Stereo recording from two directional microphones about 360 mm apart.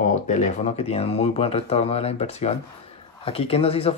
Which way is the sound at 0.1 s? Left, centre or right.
Centre.